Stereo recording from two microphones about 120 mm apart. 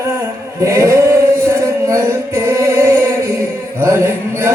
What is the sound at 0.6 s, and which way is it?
Chant, 25° right (ahead or behind).